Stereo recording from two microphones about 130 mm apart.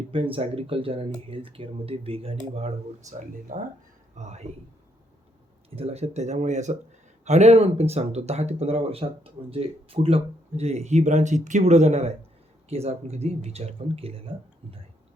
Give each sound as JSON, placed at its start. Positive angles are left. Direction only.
{"t": 0.1, "sound": "speech", "side_deg": -45}
{"t": 3.5, "sound": "speech", "side_deg": -90}
{"t": 4.1, "sound": "speech", "side_deg": -60}
{"t": 5.7, "sound": "speech", "side_deg": -50}